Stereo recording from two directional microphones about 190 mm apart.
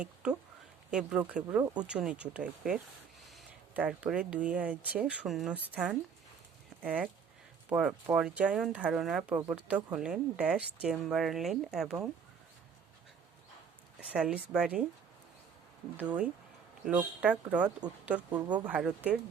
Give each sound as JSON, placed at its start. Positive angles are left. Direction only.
{"t": 0.0, "sound": "speech", "side_deg": -5}
{"t": 1.9, "sound": "speech", "side_deg": -5}
{"t": 14.1, "sound": "speech", "side_deg": -5}
{"t": 16.0, "sound": "speech", "side_deg": -5}
{"t": 18.3, "sound": "speech", "side_deg": -20}
{"t": 18.5, "sound": "speech", "side_deg": -5}